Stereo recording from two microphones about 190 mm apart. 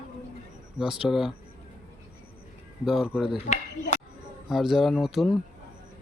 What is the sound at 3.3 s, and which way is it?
Speech, 40° left (ahead or behind).